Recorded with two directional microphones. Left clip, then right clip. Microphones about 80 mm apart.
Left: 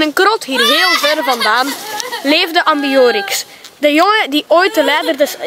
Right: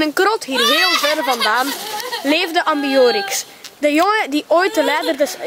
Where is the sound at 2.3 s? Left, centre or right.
Left.